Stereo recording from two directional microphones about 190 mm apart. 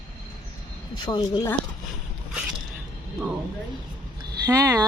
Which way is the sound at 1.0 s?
25° left (ahead or behind).